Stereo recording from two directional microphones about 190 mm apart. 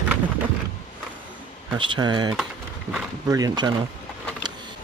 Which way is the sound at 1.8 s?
25° right (ahead or behind).